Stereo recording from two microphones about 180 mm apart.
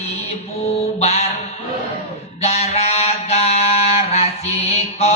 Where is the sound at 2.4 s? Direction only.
35° left (ahead or behind).